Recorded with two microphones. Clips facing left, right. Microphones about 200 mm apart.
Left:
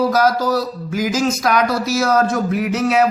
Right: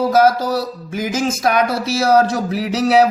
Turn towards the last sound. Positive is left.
turn(degrees=-35)  # may be behind; listen again after turning